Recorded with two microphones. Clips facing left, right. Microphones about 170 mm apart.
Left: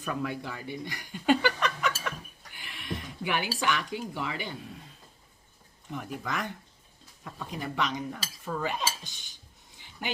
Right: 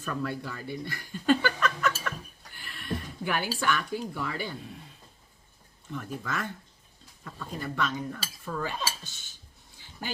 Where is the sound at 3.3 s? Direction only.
15° left (ahead or behind).